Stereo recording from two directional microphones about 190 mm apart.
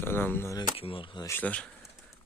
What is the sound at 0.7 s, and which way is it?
Speech, 30° left (ahead or behind).